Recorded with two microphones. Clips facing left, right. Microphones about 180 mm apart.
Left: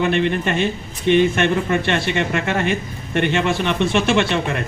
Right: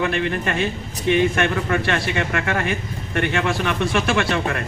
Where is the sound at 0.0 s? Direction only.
30° left (ahead or behind).